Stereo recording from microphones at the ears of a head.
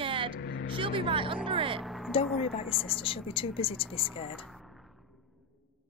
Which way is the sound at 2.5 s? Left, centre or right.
Left.